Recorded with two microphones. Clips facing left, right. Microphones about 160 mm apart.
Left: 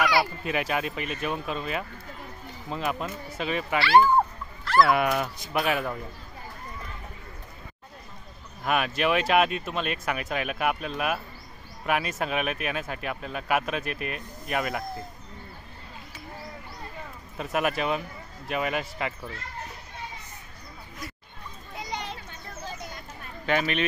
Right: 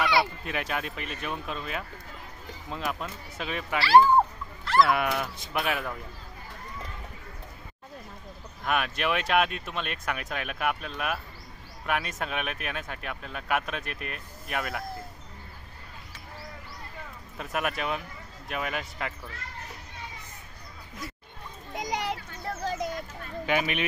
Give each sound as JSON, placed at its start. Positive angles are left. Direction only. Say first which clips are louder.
{"t": 0.0, "sound": "a sound", "louder": "left 1 dB", "side_deg": -25}
{"t": 0.5, "sound": "speech", "louder": "left 4 dB", "side_deg": 5}
{"t": 3.8, "sound": "speech", "louder": "right 1 dB", "side_deg": -35}
{"t": 4.8, "sound": "speech", "louder": "left 3 dB", "side_deg": 0}
{"t": 8.6, "sound": "speech", "louder": "left 3 dB", "side_deg": 0}
{"t": 17.4, "sound": "speech", "louder": "left 4 dB", "side_deg": 0}
{"t": 21.7, "sound": "children playing", "louder": "right 4 dB", "side_deg": -80}
{"t": 23.4, "sound": "speech", "louder": "left 2 dB", "side_deg": -10}